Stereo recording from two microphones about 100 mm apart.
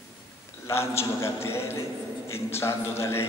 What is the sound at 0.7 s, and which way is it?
A man's voice, 25° left (ahead or behind).